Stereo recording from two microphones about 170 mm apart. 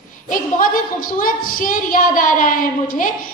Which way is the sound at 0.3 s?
55° left (ahead or behind).